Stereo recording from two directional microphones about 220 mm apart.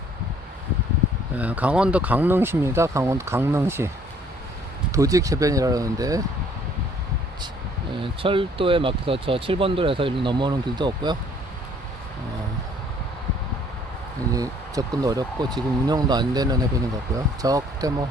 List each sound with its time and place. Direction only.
1.4 s speech: 5° right (ahead or behind)
8.0 s speech: 25° right (ahead or behind)
14.3 s speech: 15° right (ahead or behind)